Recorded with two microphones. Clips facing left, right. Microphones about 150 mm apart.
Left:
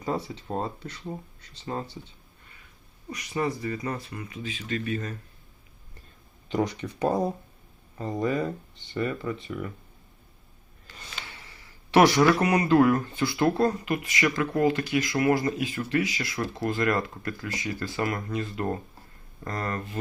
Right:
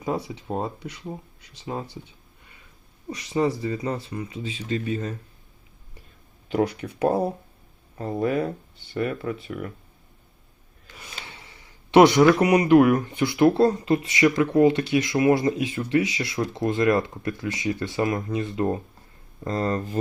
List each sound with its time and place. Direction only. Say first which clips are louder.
0.0 s speech: right 2 dB; 15° right (ahead or behind)
3.1 s speech: right 5 dB; 25° right (ahead or behind)
6.5 s speech: right 3 dB; 5° right (ahead or behind)
10.8 s a sound: right 2 dB; 5° right (ahead or behind)
11.2 s speech: right 1 dB; 20° right (ahead or behind)